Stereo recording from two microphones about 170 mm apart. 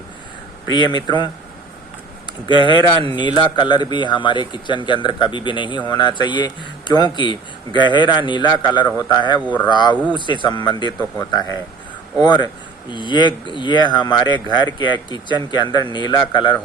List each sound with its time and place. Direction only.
0.7 s a man's voice: 25° left (ahead or behind)
2.5 s a man's voice: 30° left (ahead or behind)